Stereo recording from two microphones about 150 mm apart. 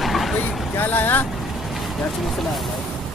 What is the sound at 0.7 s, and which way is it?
Speech, 10° left (ahead or behind).